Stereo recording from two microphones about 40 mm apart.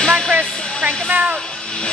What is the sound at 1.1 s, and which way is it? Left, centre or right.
Speech, right.